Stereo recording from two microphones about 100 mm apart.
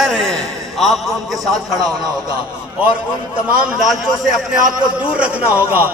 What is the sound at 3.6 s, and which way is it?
Speech, 5° right (ahead or behind).